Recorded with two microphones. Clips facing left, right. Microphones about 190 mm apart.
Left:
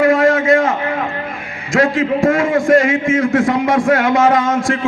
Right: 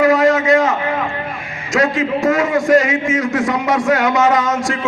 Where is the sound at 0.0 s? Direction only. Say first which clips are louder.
Even; 55° left (ahead or behind).